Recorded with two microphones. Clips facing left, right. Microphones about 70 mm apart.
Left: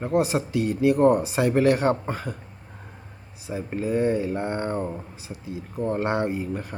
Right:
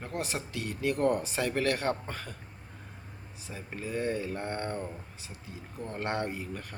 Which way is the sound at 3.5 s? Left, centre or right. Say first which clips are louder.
Left 11 dB; left.